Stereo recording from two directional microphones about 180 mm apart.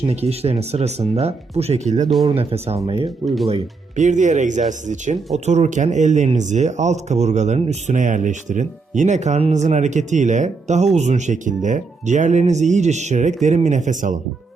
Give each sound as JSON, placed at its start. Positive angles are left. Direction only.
{"t": 0.1, "sound": "speech", "side_deg": -35}
{"t": 3.2, "sound": "speech", "side_deg": 0}
{"t": 3.5, "sound": "speech", "side_deg": -40}